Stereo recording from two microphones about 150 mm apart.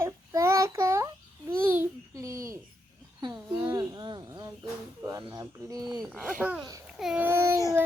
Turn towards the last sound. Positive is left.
turn(degrees=-15)  # may be behind; listen again after turning